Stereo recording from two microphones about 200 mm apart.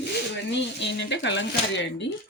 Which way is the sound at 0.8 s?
60° left (ahead or behind).